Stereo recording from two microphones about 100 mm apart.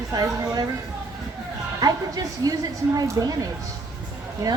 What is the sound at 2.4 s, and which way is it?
Speech, 40° right (ahead or behind).